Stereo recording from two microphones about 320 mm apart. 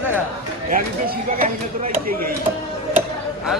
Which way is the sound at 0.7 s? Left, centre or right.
Right.